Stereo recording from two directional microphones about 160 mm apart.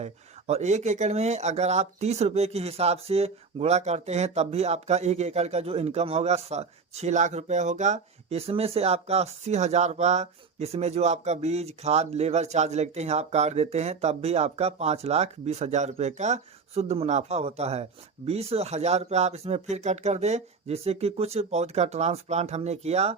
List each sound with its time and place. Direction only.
0.0 s speech: 45° right (ahead or behind)